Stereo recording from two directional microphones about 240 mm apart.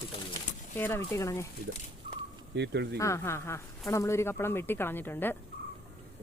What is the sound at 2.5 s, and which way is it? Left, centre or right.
Speech, right.